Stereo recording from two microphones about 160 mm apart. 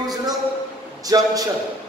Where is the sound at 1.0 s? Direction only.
25° right (ahead or behind).